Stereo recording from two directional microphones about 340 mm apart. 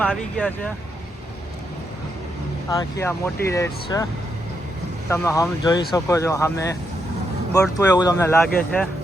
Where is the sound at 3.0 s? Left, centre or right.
Centre.